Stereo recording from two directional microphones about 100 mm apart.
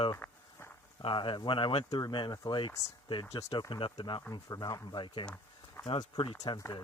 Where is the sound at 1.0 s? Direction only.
55° left (ahead or behind).